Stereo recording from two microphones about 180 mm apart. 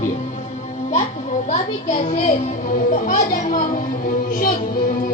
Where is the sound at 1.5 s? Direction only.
45° left (ahead or behind).